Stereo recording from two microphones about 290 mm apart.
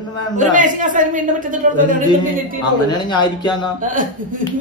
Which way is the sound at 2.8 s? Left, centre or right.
Centre.